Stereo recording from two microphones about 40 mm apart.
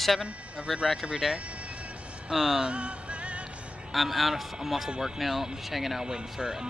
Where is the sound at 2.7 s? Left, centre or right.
Right.